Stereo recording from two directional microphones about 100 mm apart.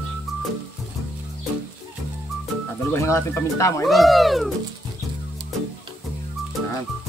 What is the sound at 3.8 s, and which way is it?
Speech, centre (ahead or behind).